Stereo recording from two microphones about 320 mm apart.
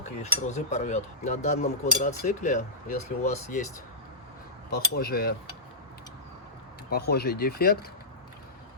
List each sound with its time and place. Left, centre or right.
0.0 s speech: left
4.7 s speech: left
6.9 s speech: left